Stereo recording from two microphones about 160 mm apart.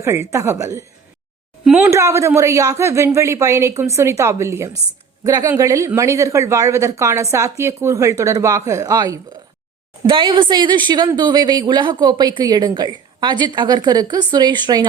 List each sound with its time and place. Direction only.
0.0 s speech: 20° right (ahead or behind)